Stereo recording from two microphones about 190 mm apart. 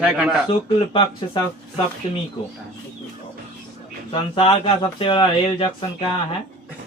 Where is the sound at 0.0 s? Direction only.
5° right (ahead or behind).